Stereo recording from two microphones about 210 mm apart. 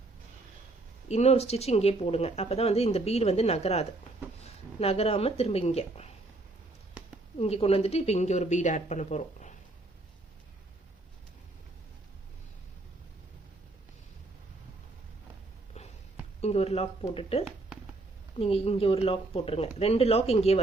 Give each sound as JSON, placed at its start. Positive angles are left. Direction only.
{"t": 1.0, "sound": "speech", "side_deg": 30}
{"t": 7.3, "sound": "speech", "side_deg": 30}
{"t": 16.4, "sound": "speech", "side_deg": 30}